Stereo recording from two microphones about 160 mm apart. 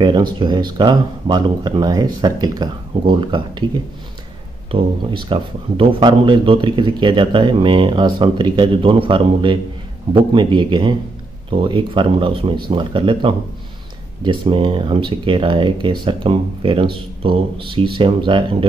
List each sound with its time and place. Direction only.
0.0 s speech: 30° right (ahead or behind)
4.6 s speech: 35° right (ahead or behind)